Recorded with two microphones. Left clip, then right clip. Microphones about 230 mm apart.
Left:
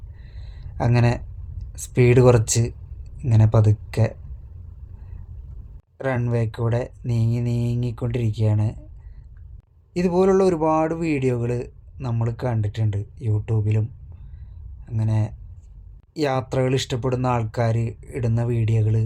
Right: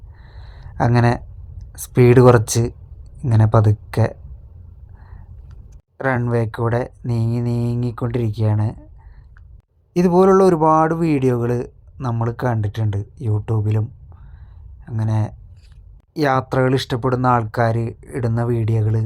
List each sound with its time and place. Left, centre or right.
0.3 s a sound: centre
3.2 s speech: centre
6.0 s speech: centre
9.9 s speech: centre
14.8 s speech: centre